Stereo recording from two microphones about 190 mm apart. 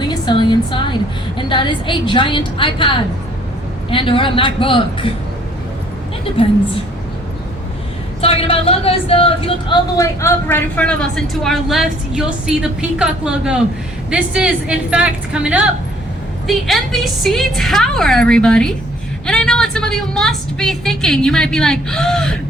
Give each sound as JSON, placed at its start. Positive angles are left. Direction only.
{"t": 0.1, "sound": "music", "side_deg": 25}
{"t": 1.4, "sound": "a woman's voice", "side_deg": 25}
{"t": 6.3, "sound": "a woman's voice", "side_deg": 30}
{"t": 8.2, "sound": "a woman's voice", "side_deg": 30}